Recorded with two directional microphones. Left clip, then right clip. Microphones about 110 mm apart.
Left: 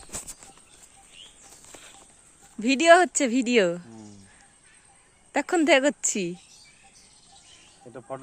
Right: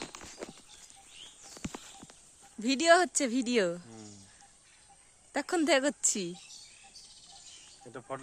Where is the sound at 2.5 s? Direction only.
5° left (ahead or behind).